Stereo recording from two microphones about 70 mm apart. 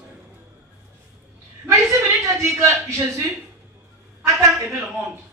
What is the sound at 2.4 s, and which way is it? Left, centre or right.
Speech, right.